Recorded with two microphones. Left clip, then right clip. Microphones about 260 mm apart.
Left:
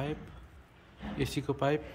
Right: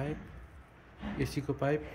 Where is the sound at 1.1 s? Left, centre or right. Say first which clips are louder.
Left 2 dB; centre.